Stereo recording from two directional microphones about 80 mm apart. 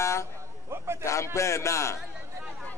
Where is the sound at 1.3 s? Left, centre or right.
Left.